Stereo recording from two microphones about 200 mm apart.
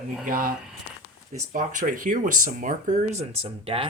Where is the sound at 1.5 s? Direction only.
40° right (ahead or behind).